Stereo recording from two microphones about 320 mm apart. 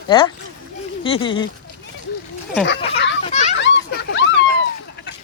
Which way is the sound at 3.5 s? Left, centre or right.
Left.